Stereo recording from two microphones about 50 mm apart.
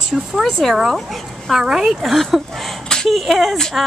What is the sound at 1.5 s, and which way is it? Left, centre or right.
Speech, centre.